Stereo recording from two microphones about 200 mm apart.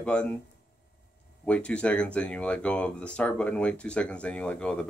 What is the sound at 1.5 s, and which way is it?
Speech, 5° left (ahead or behind).